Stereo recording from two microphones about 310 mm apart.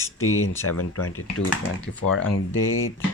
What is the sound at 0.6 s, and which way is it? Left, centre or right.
Speech, left.